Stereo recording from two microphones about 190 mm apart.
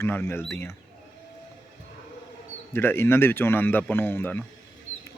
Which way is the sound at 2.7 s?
10° left (ahead or behind).